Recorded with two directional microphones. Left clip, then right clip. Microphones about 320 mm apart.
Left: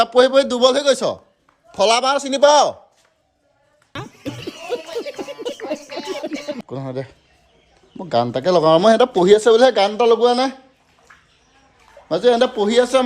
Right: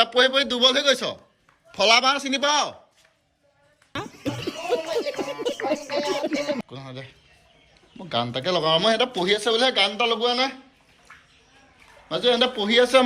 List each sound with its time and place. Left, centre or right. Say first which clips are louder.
0.0 s a man's voice: left 6 dB; centre
3.9 s a sound: even; centre
6.7 s a man's voice: left 11 dB; centre
12.0 s a man's voice: left 6 dB; centre